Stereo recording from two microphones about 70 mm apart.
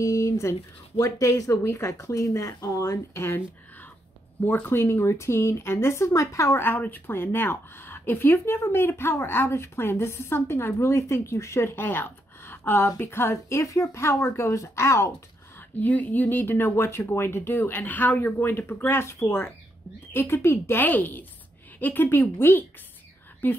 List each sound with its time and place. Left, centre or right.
0.0 s speech: left
3.2 s speech: left
6.6 s speech: left
11.7 s speech: left
15.8 s a woman's voice: left